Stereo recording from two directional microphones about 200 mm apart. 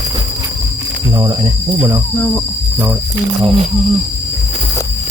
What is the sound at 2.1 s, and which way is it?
Speech, 5° left (ahead or behind).